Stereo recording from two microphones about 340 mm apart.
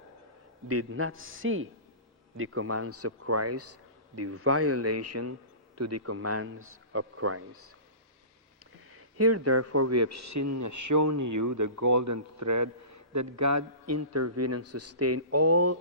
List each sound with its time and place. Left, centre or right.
0.7 s a man's voice: right
8.9 s speech: right